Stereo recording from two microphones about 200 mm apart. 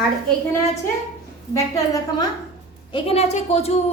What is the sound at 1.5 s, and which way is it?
Speech, 15° left (ahead or behind).